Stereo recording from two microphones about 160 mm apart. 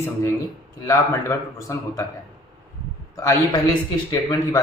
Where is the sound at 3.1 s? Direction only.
20° left (ahead or behind).